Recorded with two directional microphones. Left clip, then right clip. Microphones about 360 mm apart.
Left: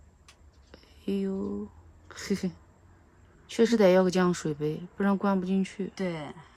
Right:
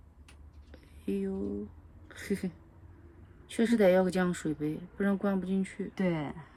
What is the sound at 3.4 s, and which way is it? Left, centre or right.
Speech, centre.